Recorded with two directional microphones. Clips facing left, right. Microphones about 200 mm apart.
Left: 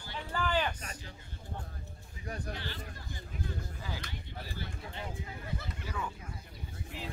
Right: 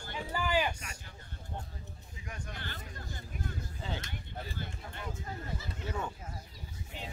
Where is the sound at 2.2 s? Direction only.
35° left (ahead or behind).